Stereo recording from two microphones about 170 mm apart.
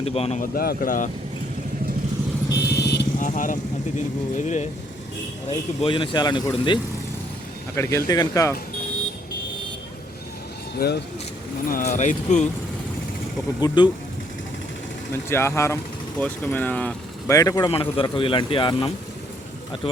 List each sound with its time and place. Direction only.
0.0 s speech: 35° left (ahead or behind)
0.5 s speech: 60° left (ahead or behind)
2.6 s vehicle: 75° left (ahead or behind)
3.2 s speech: 50° left (ahead or behind)
5.5 s a man's voice: 30° left (ahead or behind)
7.8 s a man's voice: 20° left (ahead or behind)
10.8 s speech: 70° left (ahead or behind)
11.7 s speech: 50° left (ahead or behind)
13.6 s a man's voice: 25° left (ahead or behind)
15.3 s speech: 15° left (ahead or behind)
17.3 s a man's voice: 20° left (ahead or behind)